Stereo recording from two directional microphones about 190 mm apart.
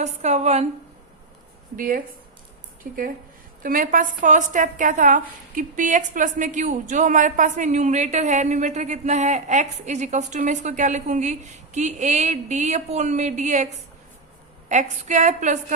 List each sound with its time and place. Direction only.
0.0 s a woman's voice: 35° right (ahead or behind)
1.7 s a woman's voice: 45° right (ahead or behind)
3.6 s a woman's voice: 45° right (ahead or behind)
14.7 s a woman's voice: 40° right (ahead or behind)